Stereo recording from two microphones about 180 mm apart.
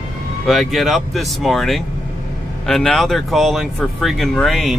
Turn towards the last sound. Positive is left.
turn(degrees=0)  # may be behind; listen again after turning